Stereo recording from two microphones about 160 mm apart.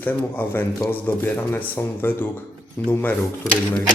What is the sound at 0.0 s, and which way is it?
Speech, 10° left (ahead or behind).